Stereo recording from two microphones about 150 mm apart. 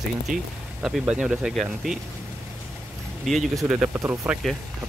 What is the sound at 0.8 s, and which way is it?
Speech, 5° right (ahead or behind).